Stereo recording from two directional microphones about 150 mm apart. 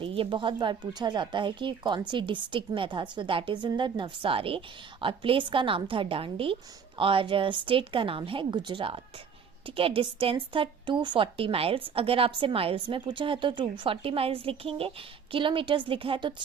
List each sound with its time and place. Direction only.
0.0 s speech: 40° right (ahead or behind)